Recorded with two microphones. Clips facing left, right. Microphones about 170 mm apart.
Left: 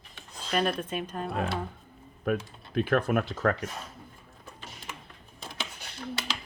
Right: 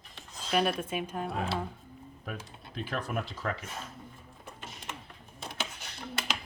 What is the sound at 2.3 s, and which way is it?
Speech, 60° left (ahead or behind).